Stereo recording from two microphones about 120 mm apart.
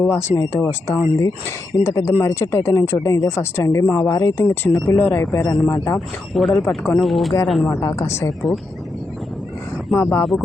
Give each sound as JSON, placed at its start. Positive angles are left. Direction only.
{"t": 0.0, "sound": "speech", "side_deg": 20}
{"t": 6.3, "sound": "speech", "side_deg": 5}
{"t": 7.7, "sound": "speech", "side_deg": 25}
{"t": 10.0, "sound": "speech", "side_deg": 20}